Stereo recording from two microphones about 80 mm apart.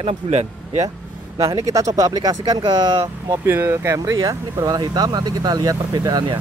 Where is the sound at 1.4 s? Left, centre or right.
Right.